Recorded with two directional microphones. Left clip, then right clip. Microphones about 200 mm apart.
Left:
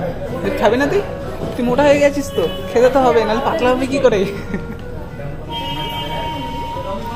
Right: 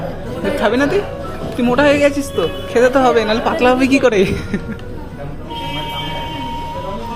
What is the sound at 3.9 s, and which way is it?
Speech, 30° right (ahead or behind).